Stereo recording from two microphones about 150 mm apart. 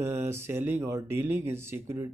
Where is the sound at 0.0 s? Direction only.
15° right (ahead or behind).